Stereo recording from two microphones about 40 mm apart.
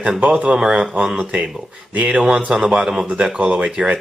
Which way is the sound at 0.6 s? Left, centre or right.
Centre.